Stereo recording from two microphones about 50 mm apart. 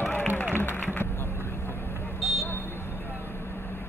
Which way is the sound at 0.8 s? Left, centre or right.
Left.